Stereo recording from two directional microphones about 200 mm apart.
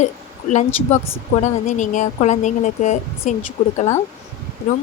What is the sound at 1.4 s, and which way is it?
Speech, 35° left (ahead or behind).